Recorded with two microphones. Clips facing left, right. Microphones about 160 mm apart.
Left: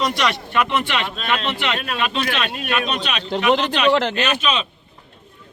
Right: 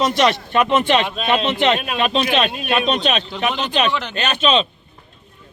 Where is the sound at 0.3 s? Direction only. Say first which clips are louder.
Right 4 dB; 25° right (ahead or behind).